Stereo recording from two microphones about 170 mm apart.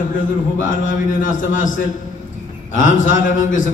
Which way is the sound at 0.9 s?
50° left (ahead or behind).